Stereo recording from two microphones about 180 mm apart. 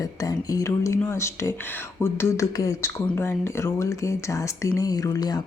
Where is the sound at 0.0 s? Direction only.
20° left (ahead or behind).